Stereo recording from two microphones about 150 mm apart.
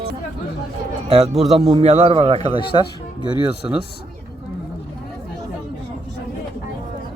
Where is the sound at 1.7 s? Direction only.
45° right (ahead or behind).